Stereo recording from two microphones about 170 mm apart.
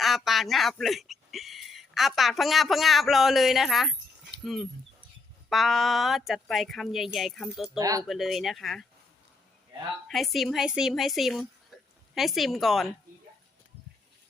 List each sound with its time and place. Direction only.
0.0 s speech: centre (ahead or behind)
7.8 s speech: 20° right (ahead or behind)
8.0 s speech: centre (ahead or behind)
10.1 s speech: centre (ahead or behind)
11.7 s a sound: centre (ahead or behind)
12.1 s speech: centre (ahead or behind)